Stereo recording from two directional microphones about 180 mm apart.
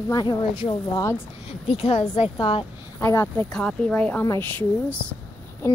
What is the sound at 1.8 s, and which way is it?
Speech, 35° left (ahead or behind).